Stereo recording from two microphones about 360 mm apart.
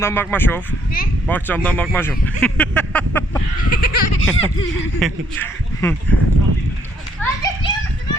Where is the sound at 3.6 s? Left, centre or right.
Left.